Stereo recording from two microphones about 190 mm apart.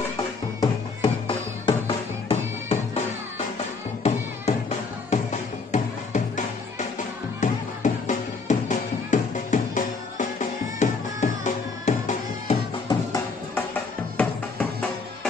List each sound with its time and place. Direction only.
0.6 s music: 25° left (ahead or behind)
4.0 s music: 35° left (ahead or behind)
12.8 s music: 15° left (ahead or behind)